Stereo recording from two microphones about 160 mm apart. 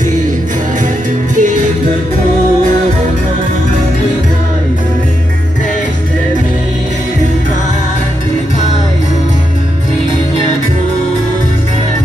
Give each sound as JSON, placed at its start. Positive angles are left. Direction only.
{"t": 1.3, "sound": "music", "side_deg": -55}